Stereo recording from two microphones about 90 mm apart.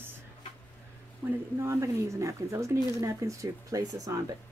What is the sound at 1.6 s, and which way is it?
Speech, 30° right (ahead or behind).